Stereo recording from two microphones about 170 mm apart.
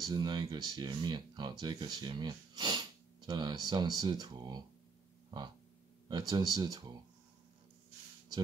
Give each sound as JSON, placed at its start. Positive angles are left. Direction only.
{"t": 0.1, "sound": "speech", "side_deg": -25}
{"t": 6.0, "sound": "speech", "side_deg": -25}